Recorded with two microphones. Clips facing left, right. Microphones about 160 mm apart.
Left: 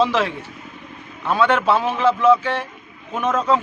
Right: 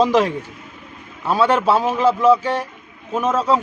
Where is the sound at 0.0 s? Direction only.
40° right (ahead or behind).